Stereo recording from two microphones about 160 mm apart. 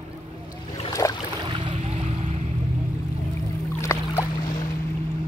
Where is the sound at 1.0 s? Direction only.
20° left (ahead or behind).